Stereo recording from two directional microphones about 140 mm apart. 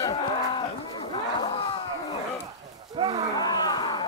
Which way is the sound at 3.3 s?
30° left (ahead or behind).